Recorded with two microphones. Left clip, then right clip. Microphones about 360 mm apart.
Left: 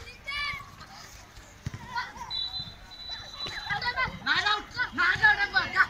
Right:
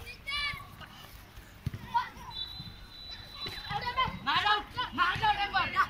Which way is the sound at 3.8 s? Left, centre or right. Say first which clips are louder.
Even; centre.